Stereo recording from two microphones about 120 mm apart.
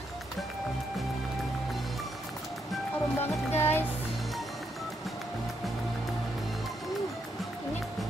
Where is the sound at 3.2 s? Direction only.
20° left (ahead or behind).